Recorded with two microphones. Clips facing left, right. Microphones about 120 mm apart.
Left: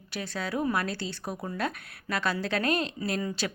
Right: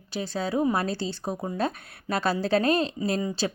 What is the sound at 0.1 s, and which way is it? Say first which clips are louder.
A woman's voice: right 5 dB; 30° right (ahead or behind).